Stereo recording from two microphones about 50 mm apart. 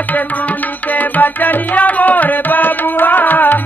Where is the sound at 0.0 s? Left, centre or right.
Left.